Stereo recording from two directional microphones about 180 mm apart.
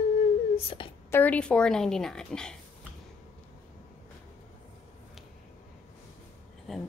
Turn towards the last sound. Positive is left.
turn(degrees=0)  # may be behind; listen again after turning